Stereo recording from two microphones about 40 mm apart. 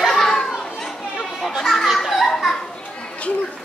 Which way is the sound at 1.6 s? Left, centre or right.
Centre.